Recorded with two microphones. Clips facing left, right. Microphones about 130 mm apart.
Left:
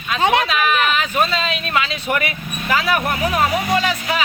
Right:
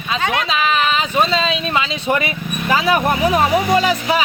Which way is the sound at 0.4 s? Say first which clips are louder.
Right 1 dB; 25° right (ahead or behind).